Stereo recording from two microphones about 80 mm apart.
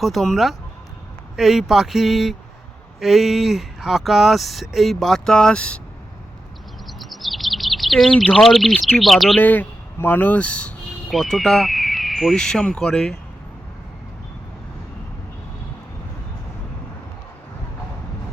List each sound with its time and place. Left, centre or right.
0.0 s speech: centre
6.8 s chirp: centre
9.0 s speech: centre
9.4 s speech: left
11.1 s speech: centre